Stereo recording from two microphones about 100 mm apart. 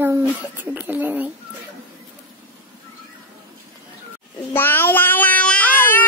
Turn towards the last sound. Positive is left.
turn(degrees=20)  # may be behind; listen again after turning